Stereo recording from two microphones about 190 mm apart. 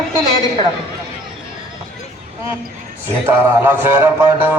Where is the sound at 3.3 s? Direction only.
10° right (ahead or behind).